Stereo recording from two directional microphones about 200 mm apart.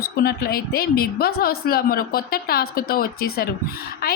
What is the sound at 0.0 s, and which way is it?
A woman's voice, 50° left (ahead or behind).